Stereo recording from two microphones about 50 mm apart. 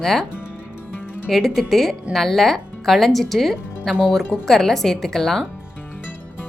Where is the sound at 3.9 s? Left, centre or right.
Centre.